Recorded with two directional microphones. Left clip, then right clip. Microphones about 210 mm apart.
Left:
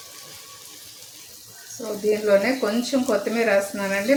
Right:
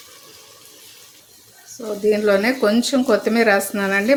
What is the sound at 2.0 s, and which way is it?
Speech, 35° right (ahead or behind).